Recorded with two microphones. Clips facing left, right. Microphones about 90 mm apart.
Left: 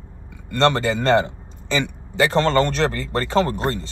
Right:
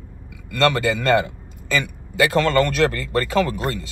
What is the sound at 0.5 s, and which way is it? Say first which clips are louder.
A man's voice: left 1 dB; 30° left (ahead or behind).